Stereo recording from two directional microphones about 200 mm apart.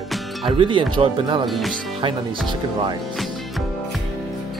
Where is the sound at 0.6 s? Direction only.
25° right (ahead or behind).